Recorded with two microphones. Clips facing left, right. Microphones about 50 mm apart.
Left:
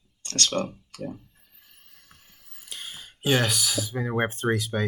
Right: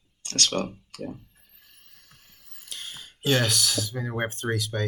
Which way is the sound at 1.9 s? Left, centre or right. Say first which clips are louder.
Left 1 dB; centre.